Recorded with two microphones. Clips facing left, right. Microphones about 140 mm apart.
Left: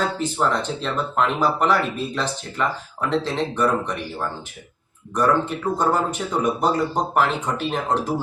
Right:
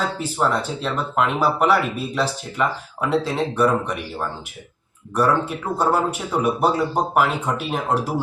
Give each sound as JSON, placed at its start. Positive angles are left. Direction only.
{"t": 0.2, "sound": "speech", "side_deg": -5}
{"t": 5.1, "sound": "speech", "side_deg": -10}